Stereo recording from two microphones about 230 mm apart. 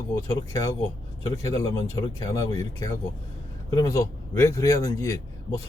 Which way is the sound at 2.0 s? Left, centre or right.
Centre.